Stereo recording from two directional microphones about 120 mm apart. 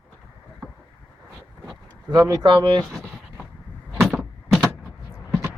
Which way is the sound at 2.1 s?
30° right (ahead or behind).